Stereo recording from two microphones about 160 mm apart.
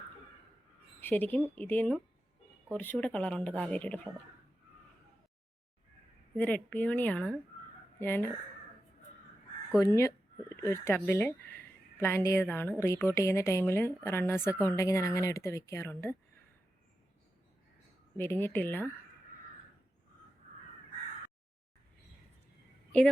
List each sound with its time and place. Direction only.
1.0 s a woman's voice: 10° left (ahead or behind)
6.3 s a woman's voice: 10° left (ahead or behind)
9.8 s a woman's voice: 15° left (ahead or behind)
18.2 s a woman's voice: 15° left (ahead or behind)
22.9 s a woman's voice: 5° left (ahead or behind)